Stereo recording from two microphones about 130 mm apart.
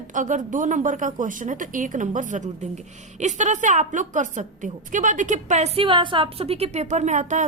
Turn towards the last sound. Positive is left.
turn(degrees=-65)  # may be behind; listen again after turning